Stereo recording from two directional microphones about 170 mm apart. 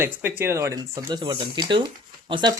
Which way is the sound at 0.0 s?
10° right (ahead or behind).